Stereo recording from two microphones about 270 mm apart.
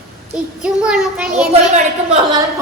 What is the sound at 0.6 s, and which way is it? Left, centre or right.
Speech, centre.